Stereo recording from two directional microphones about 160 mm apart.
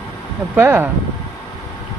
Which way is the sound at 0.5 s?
15° right (ahead or behind).